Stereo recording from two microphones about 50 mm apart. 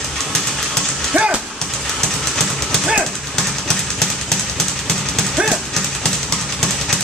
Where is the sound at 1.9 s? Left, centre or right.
Centre.